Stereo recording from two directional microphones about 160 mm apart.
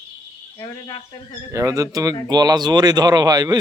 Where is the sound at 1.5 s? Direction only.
20° right (ahead or behind).